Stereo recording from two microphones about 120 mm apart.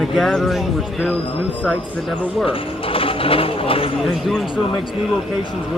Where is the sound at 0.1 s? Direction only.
Centre (ahead or behind).